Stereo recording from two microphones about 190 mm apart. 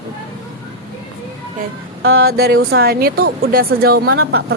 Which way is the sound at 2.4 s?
55° right (ahead or behind).